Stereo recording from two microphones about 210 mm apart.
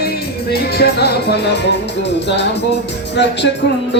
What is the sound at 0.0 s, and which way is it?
Music, 50° left (ahead or behind).